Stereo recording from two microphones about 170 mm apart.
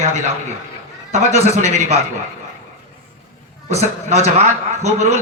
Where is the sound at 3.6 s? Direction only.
40° right (ahead or behind).